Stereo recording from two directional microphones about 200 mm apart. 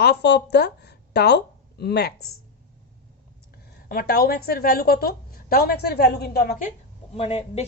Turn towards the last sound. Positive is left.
turn(degrees=30)  # may be behind; listen again after turning